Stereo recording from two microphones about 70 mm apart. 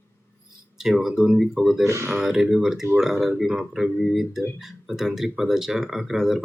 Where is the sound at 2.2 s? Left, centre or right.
Centre.